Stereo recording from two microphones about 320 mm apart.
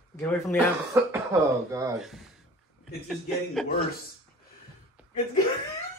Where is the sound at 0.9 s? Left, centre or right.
Centre.